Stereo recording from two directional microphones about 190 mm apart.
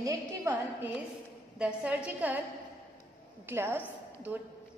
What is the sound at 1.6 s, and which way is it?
Speech, 5° right (ahead or behind).